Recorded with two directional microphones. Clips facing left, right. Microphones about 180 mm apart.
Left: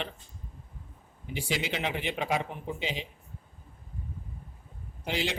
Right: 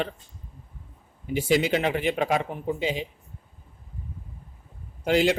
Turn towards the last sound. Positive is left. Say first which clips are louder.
# right 10 dB
turn(degrees=-50)  # may be behind; listen again after turning